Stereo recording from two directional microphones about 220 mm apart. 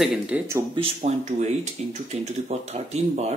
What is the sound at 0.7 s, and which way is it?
Speech, 30° right (ahead or behind).